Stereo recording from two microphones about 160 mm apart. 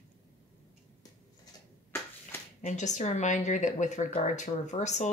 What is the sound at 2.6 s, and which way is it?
Speech, 50° left (ahead or behind).